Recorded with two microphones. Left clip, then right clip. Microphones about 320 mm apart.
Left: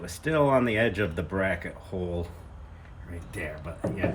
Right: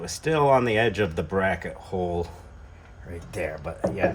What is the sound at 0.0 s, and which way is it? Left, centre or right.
Speech, centre.